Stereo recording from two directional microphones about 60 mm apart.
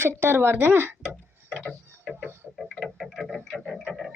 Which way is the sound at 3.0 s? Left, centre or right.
Centre.